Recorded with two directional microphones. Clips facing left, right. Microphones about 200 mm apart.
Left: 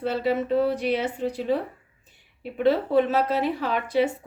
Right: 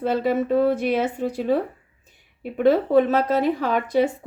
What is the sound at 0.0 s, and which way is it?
A woman's voice, 50° right (ahead or behind).